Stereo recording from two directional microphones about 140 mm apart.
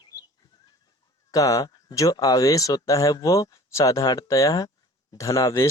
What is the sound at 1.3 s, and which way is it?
Speech, 25° left (ahead or behind).